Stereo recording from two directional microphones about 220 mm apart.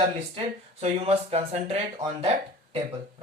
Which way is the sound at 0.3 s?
30° right (ahead or behind).